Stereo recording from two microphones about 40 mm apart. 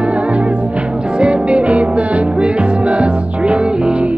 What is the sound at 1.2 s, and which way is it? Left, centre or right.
Music, right.